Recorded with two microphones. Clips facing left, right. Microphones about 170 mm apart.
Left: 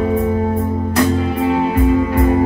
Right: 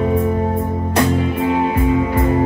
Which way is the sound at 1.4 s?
15° right (ahead or behind).